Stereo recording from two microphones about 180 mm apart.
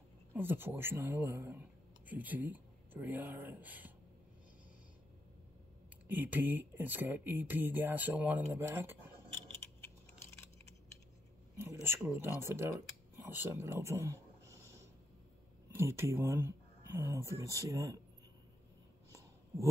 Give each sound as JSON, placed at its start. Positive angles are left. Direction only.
{"t": 0.3, "sound": "speech", "side_deg": -10}
{"t": 6.0, "sound": "speech", "side_deg": -10}
{"t": 11.6, "sound": "speech", "side_deg": -15}
{"t": 19.1, "sound": "a sound", "side_deg": -15}